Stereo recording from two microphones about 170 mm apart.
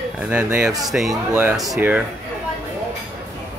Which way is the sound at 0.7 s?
20° right (ahead or behind).